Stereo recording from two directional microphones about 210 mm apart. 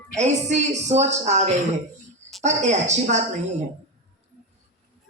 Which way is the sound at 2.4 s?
35° right (ahead or behind).